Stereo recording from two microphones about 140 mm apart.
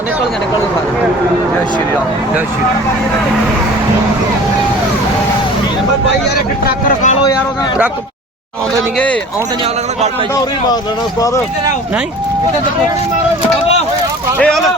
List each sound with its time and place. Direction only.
6.7 s speech: 65° left (ahead or behind)
14.3 s speech: 5° left (ahead or behind)